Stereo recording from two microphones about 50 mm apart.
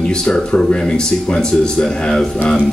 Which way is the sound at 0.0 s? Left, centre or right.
Centre.